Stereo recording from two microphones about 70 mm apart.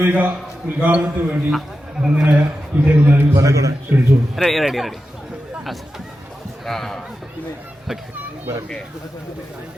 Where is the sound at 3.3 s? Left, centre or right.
Right.